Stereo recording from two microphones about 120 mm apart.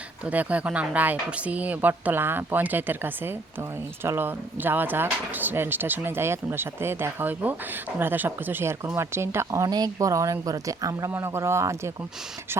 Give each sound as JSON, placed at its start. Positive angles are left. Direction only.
{"t": 0.3, "sound": "speech", "side_deg": -10}